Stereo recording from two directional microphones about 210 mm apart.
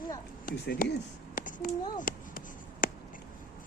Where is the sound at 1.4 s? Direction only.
40° left (ahead or behind).